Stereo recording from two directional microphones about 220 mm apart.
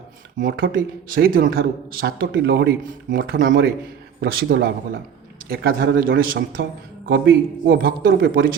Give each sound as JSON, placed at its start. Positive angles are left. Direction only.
{"t": 0.3, "sound": "a man's voice", "side_deg": -40}